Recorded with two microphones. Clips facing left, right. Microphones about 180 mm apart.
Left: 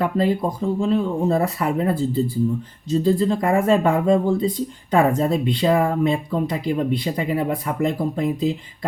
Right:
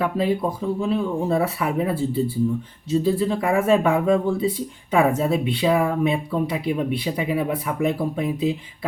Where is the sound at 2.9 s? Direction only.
5° right (ahead or behind).